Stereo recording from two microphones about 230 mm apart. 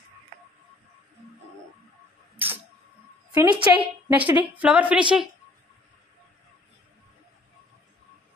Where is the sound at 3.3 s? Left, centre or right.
Centre.